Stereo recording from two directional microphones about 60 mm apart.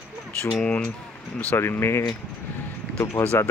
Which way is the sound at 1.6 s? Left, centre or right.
Left.